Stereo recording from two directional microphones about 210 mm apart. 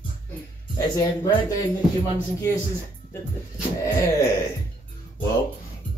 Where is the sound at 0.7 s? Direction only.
20° left (ahead or behind).